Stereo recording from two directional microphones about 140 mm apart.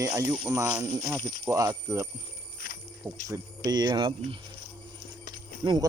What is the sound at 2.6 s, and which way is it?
Music, 85° left.